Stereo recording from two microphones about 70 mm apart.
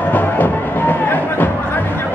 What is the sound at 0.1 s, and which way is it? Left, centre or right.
Music, left.